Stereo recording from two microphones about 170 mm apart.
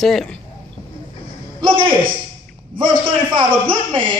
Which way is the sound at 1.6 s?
30° right (ahead or behind).